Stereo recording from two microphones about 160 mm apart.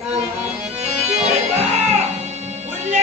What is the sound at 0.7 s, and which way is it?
Music, 40° right (ahead or behind).